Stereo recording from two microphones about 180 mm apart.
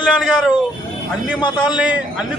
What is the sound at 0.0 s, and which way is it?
Speech, 5° right (ahead or behind).